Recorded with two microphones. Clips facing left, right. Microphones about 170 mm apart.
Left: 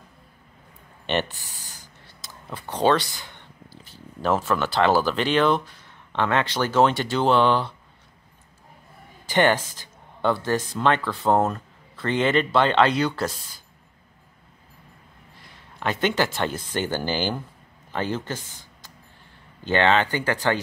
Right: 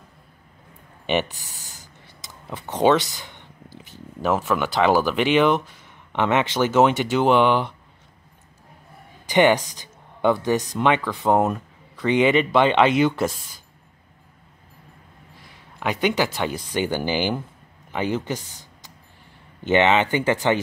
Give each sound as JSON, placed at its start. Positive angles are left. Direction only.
{"t": 1.6, "sound": "a sound", "side_deg": -20}
{"t": 6.1, "sound": "speech", "side_deg": -20}
{"t": 9.2, "sound": "speech", "side_deg": -15}
{"t": 15.8, "sound": "speech", "side_deg": -15}
{"t": 18.4, "sound": "speech", "side_deg": 0}
{"t": 19.6, "sound": "speech", "side_deg": -20}